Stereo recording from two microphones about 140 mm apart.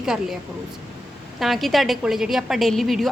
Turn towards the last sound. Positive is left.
turn(degrees=0)  # may be behind; listen again after turning